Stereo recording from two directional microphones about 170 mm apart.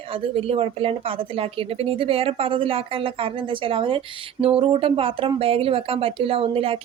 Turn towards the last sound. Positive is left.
turn(degrees=-35)  # may be behind; listen again after turning